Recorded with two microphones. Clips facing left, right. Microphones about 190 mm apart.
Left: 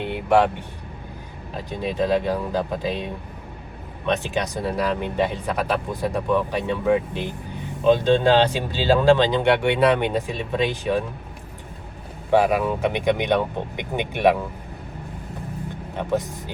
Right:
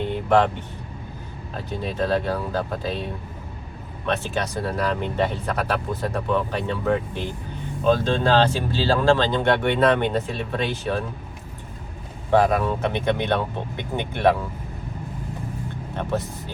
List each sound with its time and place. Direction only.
0.0 s vehicle: 10° left (ahead or behind)
1.5 s speech: 15° left (ahead or behind)
12.3 s speech: 10° left (ahead or behind)
16.0 s speech: 15° left (ahead or behind)